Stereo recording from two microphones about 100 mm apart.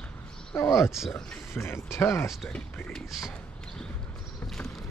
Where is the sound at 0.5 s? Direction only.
25° left (ahead or behind).